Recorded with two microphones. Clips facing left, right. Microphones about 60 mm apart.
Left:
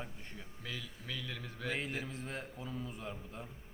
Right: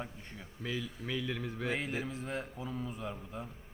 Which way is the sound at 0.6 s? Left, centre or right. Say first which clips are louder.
Right 8 dB; right.